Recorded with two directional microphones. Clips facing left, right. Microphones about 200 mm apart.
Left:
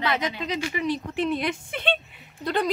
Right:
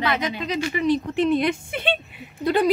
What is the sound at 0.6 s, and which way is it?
A woman's voice, 10° left (ahead or behind).